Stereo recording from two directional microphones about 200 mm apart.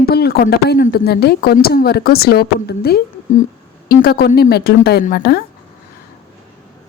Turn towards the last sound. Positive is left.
turn(degrees=50)  # may be behind; listen again after turning